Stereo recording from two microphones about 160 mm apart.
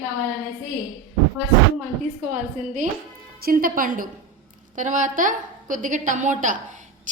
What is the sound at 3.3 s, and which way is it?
A woman's voice, 65° right (ahead or behind).